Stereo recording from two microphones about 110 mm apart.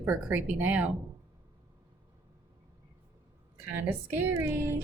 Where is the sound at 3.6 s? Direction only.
20° right (ahead or behind).